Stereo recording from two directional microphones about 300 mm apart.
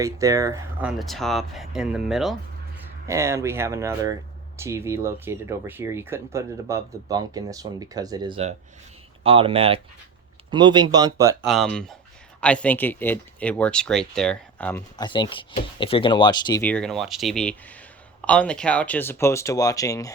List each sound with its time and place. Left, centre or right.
0.0 s speech: centre
11.4 s speech: centre